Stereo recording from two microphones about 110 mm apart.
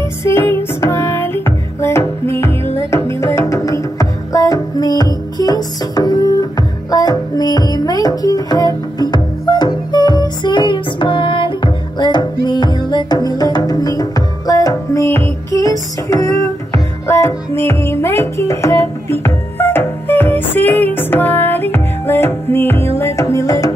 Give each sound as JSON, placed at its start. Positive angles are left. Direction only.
{"t": 0.2, "sound": "music", "side_deg": 25}
{"t": 15.0, "sound": "music", "side_deg": 20}